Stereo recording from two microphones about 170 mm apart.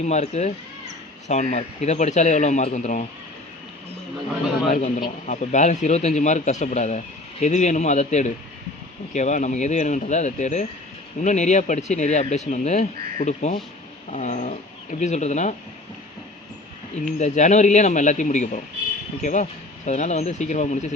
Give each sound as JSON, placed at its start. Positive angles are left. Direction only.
{"t": 0.0, "sound": "speech", "side_deg": 40}
{"t": 4.7, "sound": "speech", "side_deg": 50}
{"t": 17.0, "sound": "speech", "side_deg": 45}